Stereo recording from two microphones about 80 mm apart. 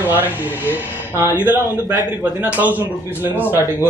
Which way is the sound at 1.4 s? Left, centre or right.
Right.